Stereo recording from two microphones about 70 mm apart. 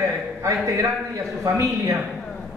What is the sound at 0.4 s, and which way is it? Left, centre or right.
Speech, right.